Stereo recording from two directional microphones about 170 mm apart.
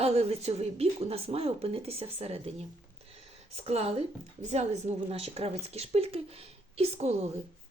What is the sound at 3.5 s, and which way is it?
A woman's voice, 40° right (ahead or behind).